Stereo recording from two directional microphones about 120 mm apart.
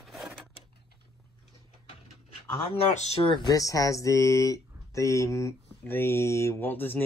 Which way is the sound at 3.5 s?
30° left (ahead or behind).